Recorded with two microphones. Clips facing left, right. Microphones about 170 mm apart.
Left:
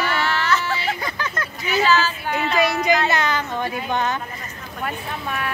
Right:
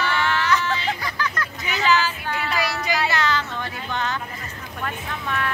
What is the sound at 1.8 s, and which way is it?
Speech, 15° right (ahead or behind).